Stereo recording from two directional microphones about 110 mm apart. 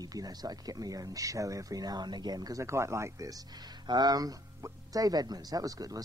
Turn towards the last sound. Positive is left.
turn(degrees=-35)  # may be behind; listen again after turning